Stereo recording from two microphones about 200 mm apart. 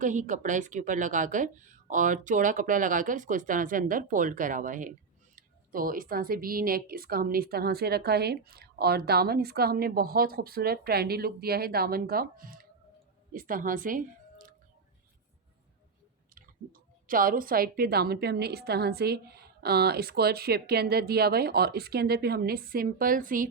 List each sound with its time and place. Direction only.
0.0 s a woman's voice: 40° right (ahead or behind)
16.3 s a woman's voice: 45° right (ahead or behind)